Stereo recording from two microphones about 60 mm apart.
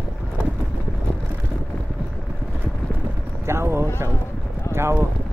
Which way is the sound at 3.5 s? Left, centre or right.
Right.